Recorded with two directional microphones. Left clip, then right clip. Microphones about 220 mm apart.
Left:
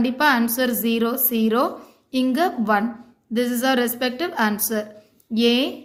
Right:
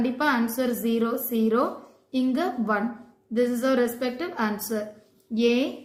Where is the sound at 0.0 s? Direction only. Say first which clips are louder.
Left 6 dB; 40° left (ahead or behind).